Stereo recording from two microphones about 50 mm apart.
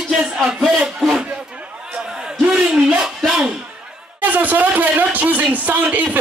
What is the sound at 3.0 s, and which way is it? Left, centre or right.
Music, centre.